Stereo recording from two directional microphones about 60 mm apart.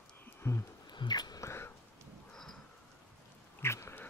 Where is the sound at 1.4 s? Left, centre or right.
Left.